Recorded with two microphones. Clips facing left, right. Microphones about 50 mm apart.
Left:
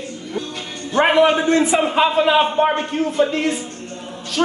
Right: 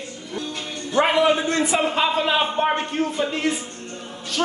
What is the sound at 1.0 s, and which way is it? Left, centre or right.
Speech, left.